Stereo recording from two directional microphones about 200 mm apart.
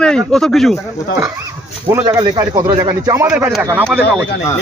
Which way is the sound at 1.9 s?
20° right (ahead or behind).